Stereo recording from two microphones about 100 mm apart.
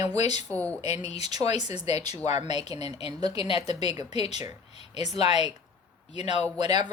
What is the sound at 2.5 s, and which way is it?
Speech, 45° right (ahead or behind).